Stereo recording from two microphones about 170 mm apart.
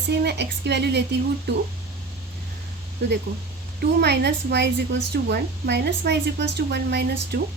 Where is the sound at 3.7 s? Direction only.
75° right (ahead or behind).